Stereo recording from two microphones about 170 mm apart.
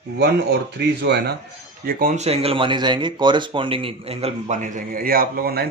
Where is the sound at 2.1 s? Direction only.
35° right (ahead or behind); by 5.6 s 65° right (ahead or behind).